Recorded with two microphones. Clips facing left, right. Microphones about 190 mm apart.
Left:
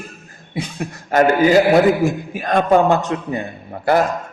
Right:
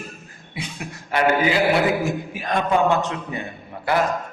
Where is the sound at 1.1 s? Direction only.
45° left (ahead or behind).